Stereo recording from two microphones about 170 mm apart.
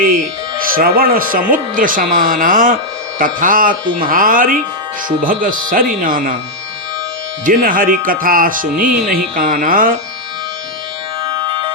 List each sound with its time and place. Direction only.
0.7 s speech: 60° right (ahead or behind)
7.4 s speech: 55° right (ahead or behind)
11.2 s music: 30° right (ahead or behind)